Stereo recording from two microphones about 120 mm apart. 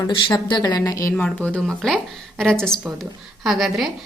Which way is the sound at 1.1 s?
10° left (ahead or behind).